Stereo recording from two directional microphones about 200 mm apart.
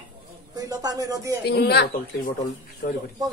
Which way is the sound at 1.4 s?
55° left (ahead or behind).